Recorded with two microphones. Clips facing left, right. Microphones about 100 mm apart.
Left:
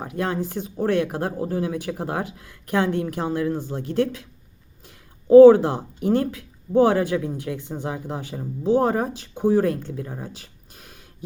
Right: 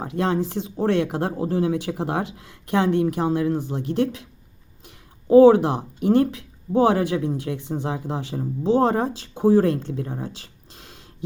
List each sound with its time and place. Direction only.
0.0 s speech: 25° right (ahead or behind)
5.3 s speech: 20° right (ahead or behind)